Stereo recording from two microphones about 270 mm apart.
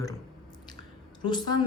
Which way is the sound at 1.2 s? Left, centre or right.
Centre.